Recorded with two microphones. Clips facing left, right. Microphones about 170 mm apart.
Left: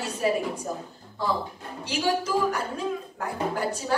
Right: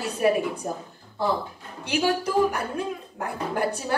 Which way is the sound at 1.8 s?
60° right (ahead or behind).